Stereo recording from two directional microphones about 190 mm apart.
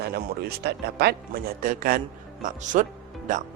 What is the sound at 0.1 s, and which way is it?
Speech, 55° right (ahead or behind).